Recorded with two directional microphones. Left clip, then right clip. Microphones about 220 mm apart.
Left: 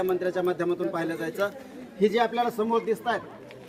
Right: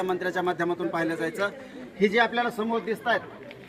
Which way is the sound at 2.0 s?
25° right (ahead or behind).